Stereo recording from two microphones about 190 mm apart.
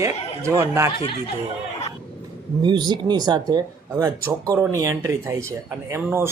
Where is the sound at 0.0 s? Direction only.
15° right (ahead or behind).